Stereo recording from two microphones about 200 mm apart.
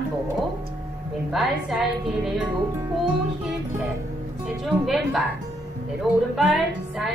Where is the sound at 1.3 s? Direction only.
Centre (ahead or behind).